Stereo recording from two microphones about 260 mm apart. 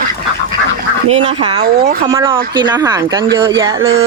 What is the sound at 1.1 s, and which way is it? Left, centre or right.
Speech, centre.